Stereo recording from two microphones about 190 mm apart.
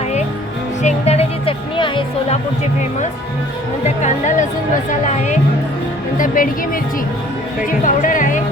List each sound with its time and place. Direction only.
0.8 s music: 35° left (ahead or behind)
3.8 s speech: 40° left (ahead or behind)
7.7 s speech: 45° left (ahead or behind)